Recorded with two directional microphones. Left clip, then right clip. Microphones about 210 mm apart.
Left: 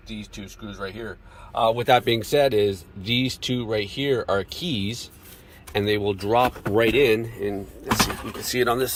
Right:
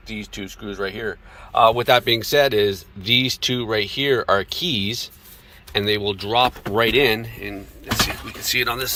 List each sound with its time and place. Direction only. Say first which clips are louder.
0.8 s speech: right 7 dB; 35° right (ahead or behind)
1.7 s speech: right 2 dB; 15° left (ahead or behind)
7.4 s speech: left 3 dB; 25° left (ahead or behind)